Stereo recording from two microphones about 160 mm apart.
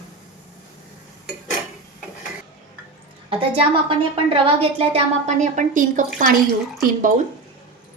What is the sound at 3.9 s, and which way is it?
A woman's voice, 35° right (ahead or behind).